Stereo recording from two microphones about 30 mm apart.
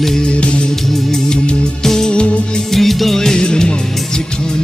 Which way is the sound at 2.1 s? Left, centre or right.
Left.